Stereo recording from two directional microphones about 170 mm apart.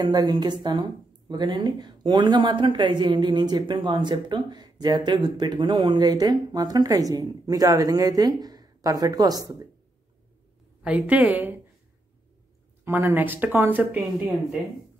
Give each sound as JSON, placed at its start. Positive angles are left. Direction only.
{"t": 0.0, "sound": "speech", "side_deg": -25}
{"t": 10.8, "sound": "speech", "side_deg": -10}
{"t": 12.8, "sound": "speech", "side_deg": -15}